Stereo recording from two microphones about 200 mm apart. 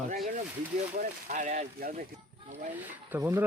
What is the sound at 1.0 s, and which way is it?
Speech, 40° right (ahead or behind).